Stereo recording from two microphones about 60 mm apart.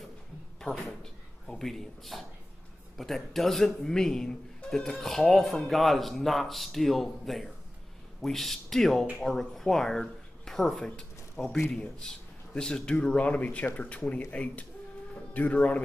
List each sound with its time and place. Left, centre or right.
0.6 s a man's voice: centre; by 15.8 s left